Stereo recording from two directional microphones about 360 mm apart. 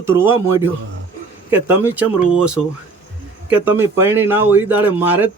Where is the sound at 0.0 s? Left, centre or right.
Centre.